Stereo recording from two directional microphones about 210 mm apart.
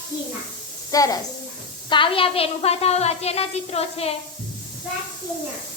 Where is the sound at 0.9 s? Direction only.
15° left (ahead or behind).